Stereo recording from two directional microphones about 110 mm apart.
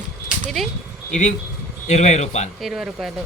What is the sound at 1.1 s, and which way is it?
Speech, 90° left.